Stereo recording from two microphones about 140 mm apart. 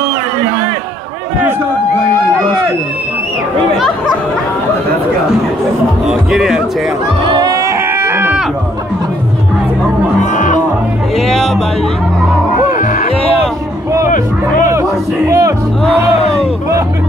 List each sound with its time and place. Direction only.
6.0 s music: 5° right (ahead or behind)
7.2 s a sound: 25° right (ahead or behind)
10.3 s music: 65° left (ahead or behind)
11.1 s music: centre (ahead or behind)
14.7 s music: 20° right (ahead or behind)
15.8 s music: 5° left (ahead or behind)